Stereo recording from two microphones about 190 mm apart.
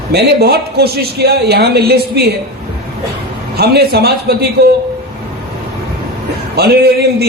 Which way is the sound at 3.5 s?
60° right (ahead or behind).